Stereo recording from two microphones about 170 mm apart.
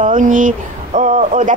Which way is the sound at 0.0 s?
50° right (ahead or behind).